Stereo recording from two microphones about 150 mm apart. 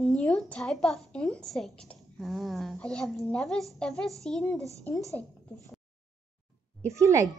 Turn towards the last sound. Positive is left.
turn(degrees=-20)  # may be behind; listen again after turning